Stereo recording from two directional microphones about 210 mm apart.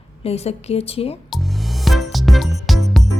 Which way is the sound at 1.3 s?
Centre (ahead or behind).